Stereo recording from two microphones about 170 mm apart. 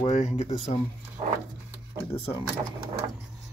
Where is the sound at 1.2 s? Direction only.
40° right (ahead or behind).